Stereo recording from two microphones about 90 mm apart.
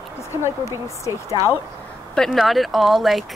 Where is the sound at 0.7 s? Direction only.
35° left (ahead or behind).